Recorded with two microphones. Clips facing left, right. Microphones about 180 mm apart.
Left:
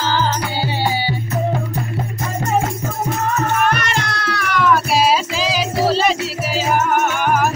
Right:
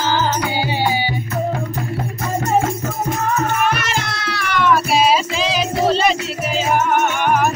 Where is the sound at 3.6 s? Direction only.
Centre (ahead or behind).